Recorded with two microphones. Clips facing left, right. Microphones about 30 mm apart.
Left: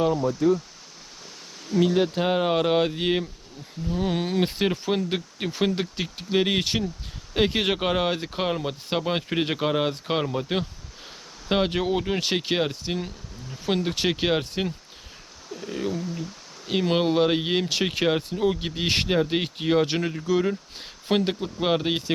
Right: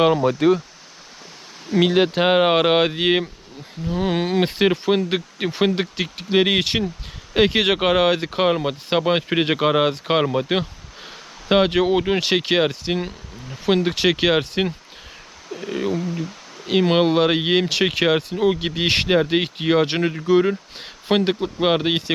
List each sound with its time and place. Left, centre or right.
0.0 s speech: right
1.7 s speech: right
6.0 s speech: right
8.3 s speech: right
10.1 s a sound: right
11.9 s speech: right
12.2 s speech: right
13.9 s speech: right
15.5 s speech: right
17.7 s speech: right
18.3 s speech: right
18.6 s speech: right
19.0 s speech: right
21.4 s speech: right